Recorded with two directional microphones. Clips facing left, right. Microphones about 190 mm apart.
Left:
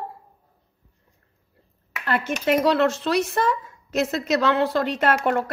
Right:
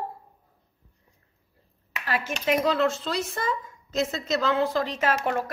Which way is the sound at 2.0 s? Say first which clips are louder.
Left 4 dB; 60° left (ahead or behind).